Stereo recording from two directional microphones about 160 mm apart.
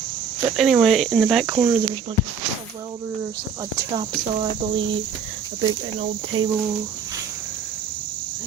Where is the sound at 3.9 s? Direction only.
35° right (ahead or behind).